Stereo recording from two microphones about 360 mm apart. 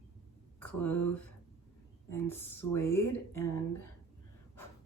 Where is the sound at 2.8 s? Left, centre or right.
Left.